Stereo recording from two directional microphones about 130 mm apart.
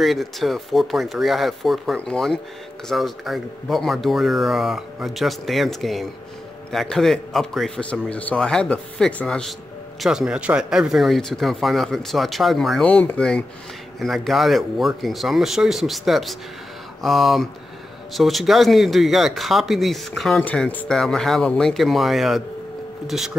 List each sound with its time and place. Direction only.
0.0 s a man's voice: centre (ahead or behind)
12.8 s a man's voice: 10° left (ahead or behind)